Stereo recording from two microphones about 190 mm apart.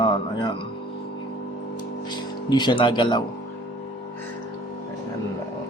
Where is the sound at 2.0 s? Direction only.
25° left (ahead or behind).